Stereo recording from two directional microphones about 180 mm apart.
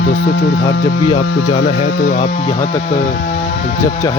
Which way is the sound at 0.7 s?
30° left (ahead or behind).